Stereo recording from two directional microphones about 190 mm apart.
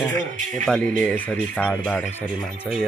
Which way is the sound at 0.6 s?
Centre (ahead or behind).